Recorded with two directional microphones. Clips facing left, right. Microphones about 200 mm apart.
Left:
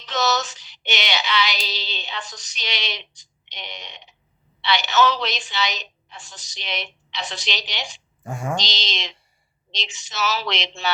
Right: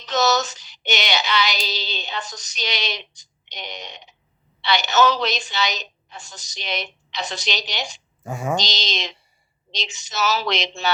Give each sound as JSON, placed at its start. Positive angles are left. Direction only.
{"t": 0.0, "sound": "female singing", "side_deg": -40}
{"t": 8.3, "sound": "a sound", "side_deg": 0}
{"t": 8.5, "sound": "female singing", "side_deg": -45}